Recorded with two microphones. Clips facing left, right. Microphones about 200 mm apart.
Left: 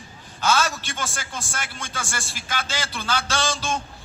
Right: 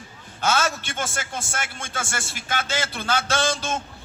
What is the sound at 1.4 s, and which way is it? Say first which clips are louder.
Speech: right 1 dB; 25° right (ahead or behind).